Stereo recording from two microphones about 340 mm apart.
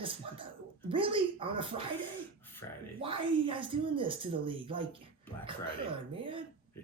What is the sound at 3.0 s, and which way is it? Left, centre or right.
Speech, centre.